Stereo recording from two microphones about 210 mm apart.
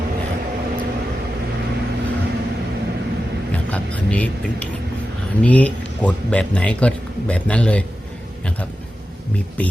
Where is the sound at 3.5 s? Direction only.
5° left (ahead or behind).